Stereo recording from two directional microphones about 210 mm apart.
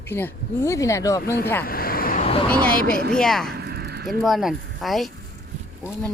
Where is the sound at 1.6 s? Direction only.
45° left (ahead or behind).